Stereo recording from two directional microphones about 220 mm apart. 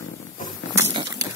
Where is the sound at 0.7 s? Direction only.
15° right (ahead or behind).